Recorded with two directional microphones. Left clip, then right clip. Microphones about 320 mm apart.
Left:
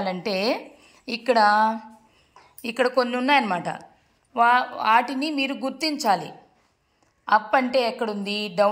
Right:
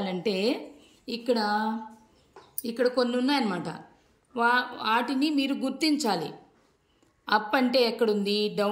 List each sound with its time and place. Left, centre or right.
0.0 s a woman's voice: centre
1.0 s a woman's voice: centre
1.4 s a woman's voice: centre
2.7 s a woman's voice: centre